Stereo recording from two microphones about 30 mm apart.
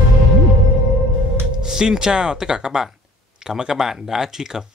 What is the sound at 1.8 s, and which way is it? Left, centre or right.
Speech, right.